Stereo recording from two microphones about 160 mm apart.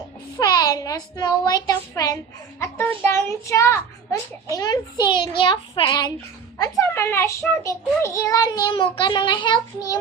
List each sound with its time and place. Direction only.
0.3 s a child's voice: 25° left (ahead or behind)
2.6 s a child's voice: 10° left (ahead or behind); by 6.1 s 30° left (ahead or behind)
6.6 s a child's voice: 15° left (ahead or behind)